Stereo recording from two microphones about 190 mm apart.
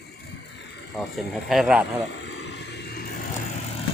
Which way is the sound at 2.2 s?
65° left (ahead or behind).